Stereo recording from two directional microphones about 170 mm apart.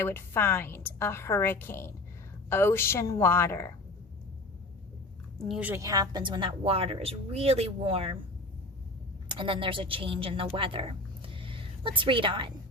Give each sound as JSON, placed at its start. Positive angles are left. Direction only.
{"t": 0.0, "sound": "a woman's voice", "side_deg": 15}
{"t": 5.5, "sound": "a woman's voice", "side_deg": -10}
{"t": 9.3, "sound": "a woman's voice", "side_deg": -30}